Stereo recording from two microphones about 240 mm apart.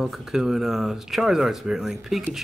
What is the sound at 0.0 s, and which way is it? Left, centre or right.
Speech, centre.